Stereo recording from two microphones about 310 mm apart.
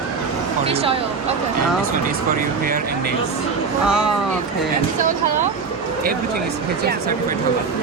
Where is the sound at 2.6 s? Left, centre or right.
Right.